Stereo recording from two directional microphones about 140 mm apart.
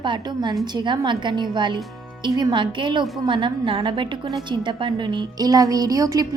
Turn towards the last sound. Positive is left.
turn(degrees=-25)  # may be behind; listen again after turning